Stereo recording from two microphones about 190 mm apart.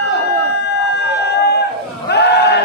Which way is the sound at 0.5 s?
60° left (ahead or behind).